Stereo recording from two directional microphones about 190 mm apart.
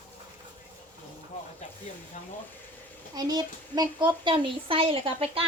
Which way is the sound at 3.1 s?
20° right (ahead or behind).